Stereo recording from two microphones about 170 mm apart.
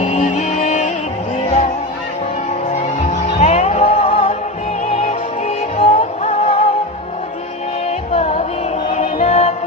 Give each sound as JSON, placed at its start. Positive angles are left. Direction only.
{"t": 0.0, "sound": "music", "side_deg": 45}
{"t": 3.3, "sound": "music", "side_deg": 40}
{"t": 7.9, "sound": "music", "side_deg": 40}